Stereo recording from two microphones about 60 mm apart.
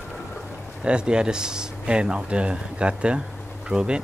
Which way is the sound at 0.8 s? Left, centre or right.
Centre.